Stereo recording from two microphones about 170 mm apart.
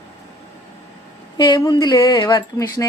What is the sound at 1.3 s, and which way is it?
Speech, 25° left (ahead or behind).